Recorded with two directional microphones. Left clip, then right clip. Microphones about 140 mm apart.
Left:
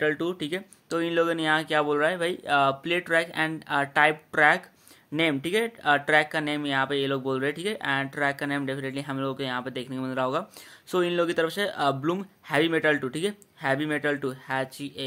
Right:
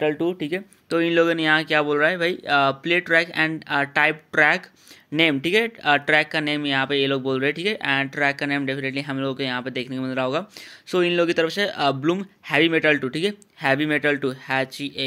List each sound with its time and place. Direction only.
0.0 s speech: 5° right (ahead or behind)
13.6 s speech: 20° right (ahead or behind)